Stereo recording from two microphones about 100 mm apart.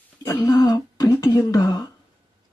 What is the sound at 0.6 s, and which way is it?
Speech, 40° left (ahead or behind).